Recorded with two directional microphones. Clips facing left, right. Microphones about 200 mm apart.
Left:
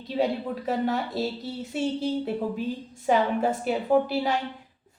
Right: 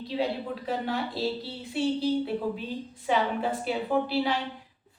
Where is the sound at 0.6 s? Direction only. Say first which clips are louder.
Left 4 dB; 45° left (ahead or behind).